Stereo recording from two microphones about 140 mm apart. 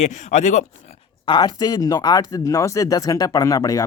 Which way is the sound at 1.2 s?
30° left (ahead or behind).